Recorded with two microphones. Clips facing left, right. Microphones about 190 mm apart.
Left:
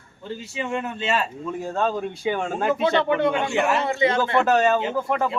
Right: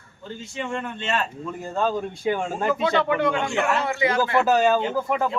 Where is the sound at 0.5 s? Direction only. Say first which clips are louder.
Left 2 dB; 5° left (ahead or behind).